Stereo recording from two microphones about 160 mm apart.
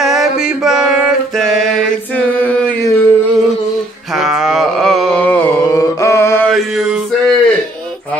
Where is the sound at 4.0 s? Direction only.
Centre (ahead or behind); by 6.5 s 15° left (ahead or behind).